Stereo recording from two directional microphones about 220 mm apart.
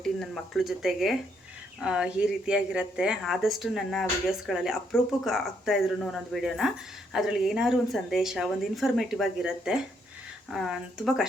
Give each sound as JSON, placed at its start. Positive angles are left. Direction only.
{"t": 0.0, "sound": "a woman's voice", "side_deg": 0}